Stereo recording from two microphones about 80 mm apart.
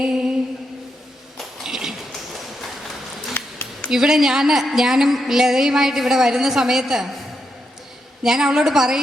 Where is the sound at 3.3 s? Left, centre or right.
Left.